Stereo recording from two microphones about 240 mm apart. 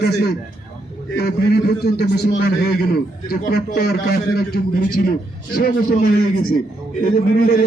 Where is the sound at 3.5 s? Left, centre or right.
Left.